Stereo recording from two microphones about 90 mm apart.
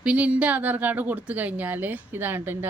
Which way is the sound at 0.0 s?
15° right (ahead or behind).